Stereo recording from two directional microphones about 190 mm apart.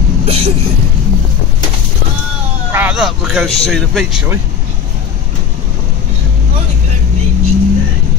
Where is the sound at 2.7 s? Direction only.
10° right (ahead or behind).